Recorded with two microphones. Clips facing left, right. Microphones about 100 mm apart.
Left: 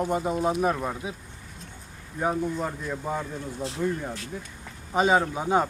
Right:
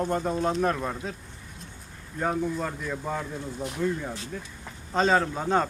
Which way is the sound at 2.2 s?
10° left (ahead or behind).